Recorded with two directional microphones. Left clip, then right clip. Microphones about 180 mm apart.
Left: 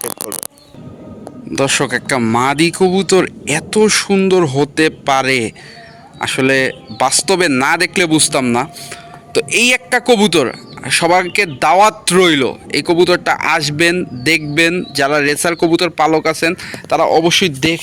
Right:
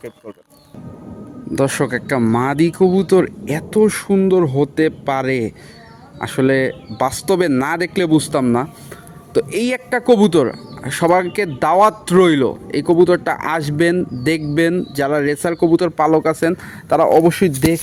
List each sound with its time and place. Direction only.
1.5 s speech: 20° right (ahead or behind)
17.1 s speech: 5° right (ahead or behind)